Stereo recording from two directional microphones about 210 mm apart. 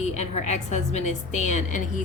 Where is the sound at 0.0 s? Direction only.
35° left (ahead or behind).